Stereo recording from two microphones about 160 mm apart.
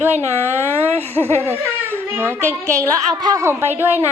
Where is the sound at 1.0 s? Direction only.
10° left (ahead or behind).